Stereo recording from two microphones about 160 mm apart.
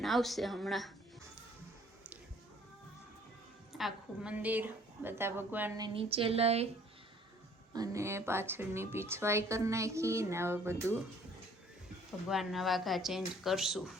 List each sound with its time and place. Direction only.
0.0 s speech: centre (ahead or behind)
3.7 s speech: centre (ahead or behind)
5.7 s speech: 30° right (ahead or behind)
7.7 s speech: 20° right (ahead or behind)
12.3 s speech: centre (ahead or behind)